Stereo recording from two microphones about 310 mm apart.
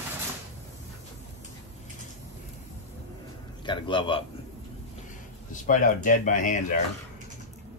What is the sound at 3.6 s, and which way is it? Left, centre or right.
Speech, centre.